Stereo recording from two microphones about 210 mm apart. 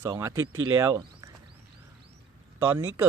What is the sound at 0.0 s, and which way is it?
Speech, 15° right (ahead or behind).